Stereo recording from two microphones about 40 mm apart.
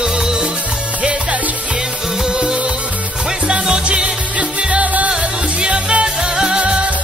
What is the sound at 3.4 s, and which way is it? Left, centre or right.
Music, right.